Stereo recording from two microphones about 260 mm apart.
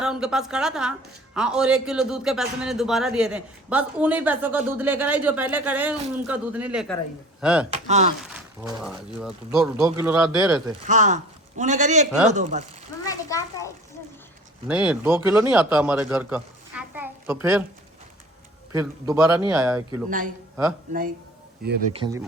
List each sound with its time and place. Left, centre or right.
0.0 s a woman's voice: centre
7.7 s a man's voice: right
8.8 s a woman's voice: centre
10.8 s a man's voice: right
13.1 s a child's voice: centre
14.7 s a man's voice: centre
18.7 s a man's voice: centre
20.1 s a man's voice: right
21.6 s a man's voice: right
21.9 s a man's voice: centre